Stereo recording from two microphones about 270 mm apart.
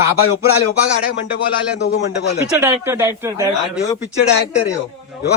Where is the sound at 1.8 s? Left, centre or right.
Left.